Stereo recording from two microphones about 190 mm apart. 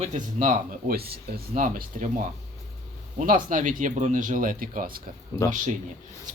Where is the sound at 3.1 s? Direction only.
45° right (ahead or behind).